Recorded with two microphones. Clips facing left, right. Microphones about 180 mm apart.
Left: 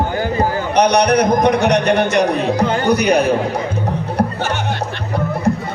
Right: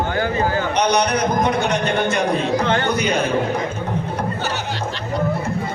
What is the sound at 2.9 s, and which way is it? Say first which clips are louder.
Speech: left 6 dB; 70° left (ahead or behind).